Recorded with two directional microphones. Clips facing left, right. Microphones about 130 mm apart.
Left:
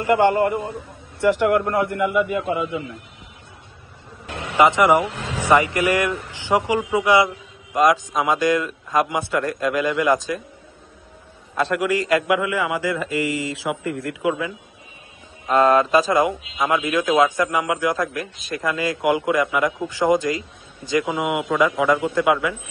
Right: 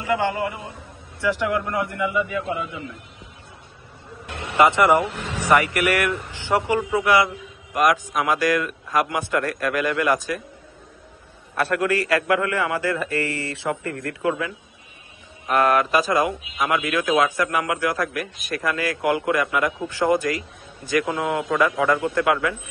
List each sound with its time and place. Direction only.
0.0 s a man's voice: 55° left (ahead or behind)
4.6 s a man's voice: 15° left (ahead or behind)
11.5 s a man's voice: 15° left (ahead or behind)
15.4 s a man's voice: 25° left (ahead or behind)